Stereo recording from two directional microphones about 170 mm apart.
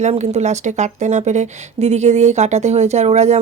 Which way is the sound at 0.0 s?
40° right (ahead or behind).